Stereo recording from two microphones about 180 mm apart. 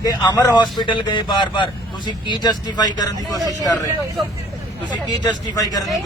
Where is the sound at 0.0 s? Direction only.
20° left (ahead or behind).